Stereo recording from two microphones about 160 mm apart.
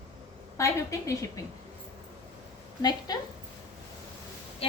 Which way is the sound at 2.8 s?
25° left (ahead or behind).